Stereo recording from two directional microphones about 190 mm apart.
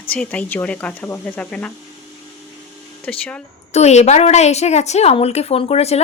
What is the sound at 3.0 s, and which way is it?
Speech, 5° left (ahead or behind).